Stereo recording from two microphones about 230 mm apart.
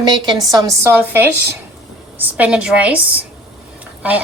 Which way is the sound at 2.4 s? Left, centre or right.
Centre.